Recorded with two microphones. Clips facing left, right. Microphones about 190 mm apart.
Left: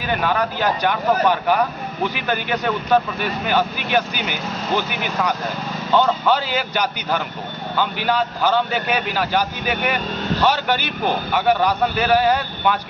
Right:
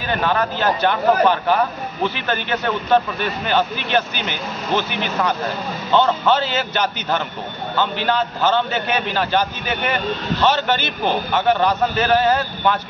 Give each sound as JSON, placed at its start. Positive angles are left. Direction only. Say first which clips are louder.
{"t": 0.1, "sound": "speech", "louder": "right 1 dB", "side_deg": 10}